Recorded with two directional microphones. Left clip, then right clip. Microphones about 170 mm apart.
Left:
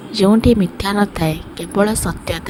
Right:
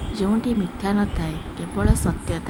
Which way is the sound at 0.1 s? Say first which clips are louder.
Left 11 dB; 40° left (ahead or behind).